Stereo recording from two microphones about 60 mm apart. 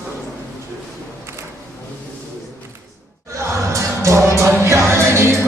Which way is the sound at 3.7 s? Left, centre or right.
Right.